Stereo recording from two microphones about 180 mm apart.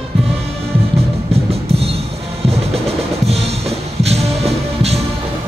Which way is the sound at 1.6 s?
35° right (ahead or behind).